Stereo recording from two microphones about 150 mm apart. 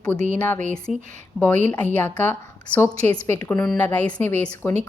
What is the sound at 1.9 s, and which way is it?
A woman's voice, 10° left (ahead or behind).